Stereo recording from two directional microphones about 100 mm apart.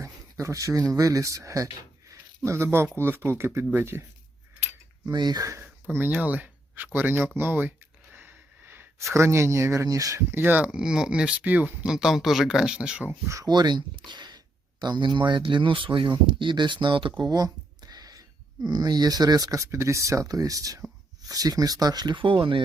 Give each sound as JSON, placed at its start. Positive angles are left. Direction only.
{"t": 0.0, "sound": "a sound", "side_deg": -30}
{"t": 0.9, "sound": "speech", "side_deg": -35}
{"t": 5.0, "sound": "speech", "side_deg": -40}
{"t": 5.6, "sound": "speech", "side_deg": -20}
{"t": 11.9, "sound": "speech", "side_deg": -5}
{"t": 13.2, "sound": "speech", "side_deg": -30}
{"t": 13.5, "sound": "speech", "side_deg": -45}
{"t": 19.5, "sound": "speech", "side_deg": -30}